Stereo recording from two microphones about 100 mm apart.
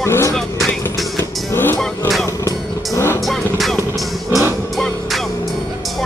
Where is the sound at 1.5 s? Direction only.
20° left (ahead or behind).